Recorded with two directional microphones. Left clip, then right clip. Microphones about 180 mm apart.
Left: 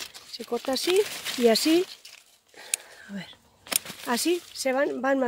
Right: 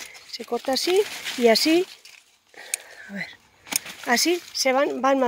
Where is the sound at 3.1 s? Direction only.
Centre (ahead or behind).